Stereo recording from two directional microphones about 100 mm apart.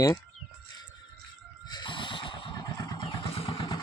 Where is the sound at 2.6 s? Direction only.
35° left (ahead or behind).